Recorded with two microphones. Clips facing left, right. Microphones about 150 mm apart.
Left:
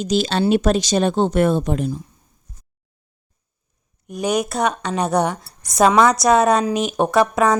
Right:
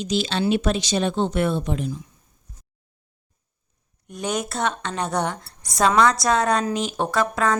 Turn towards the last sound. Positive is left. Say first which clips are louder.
# left 6 dB
turn(degrees=20)  # may be behind; listen again after turning